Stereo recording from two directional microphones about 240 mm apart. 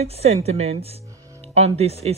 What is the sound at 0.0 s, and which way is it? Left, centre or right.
Speech, right.